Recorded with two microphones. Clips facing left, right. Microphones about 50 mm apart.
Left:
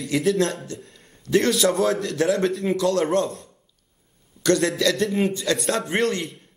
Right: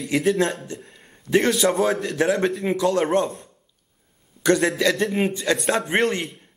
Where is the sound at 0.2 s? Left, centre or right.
Centre.